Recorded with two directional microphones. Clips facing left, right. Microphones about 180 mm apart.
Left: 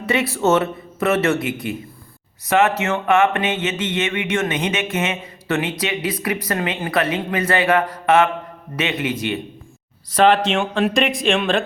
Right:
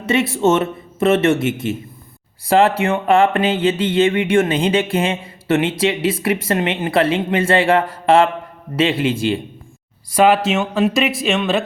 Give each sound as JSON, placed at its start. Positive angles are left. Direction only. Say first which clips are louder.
{"t": 0.0, "sound": "mantra", "louder": "right 3 dB", "side_deg": -25}
{"t": 10.1, "sound": "speech", "louder": "right 1 dB", "side_deg": -10}